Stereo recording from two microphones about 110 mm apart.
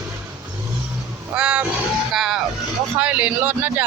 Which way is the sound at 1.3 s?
10° right (ahead or behind).